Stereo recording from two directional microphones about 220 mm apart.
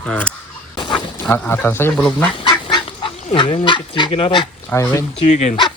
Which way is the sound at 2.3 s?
20° left (ahead or behind).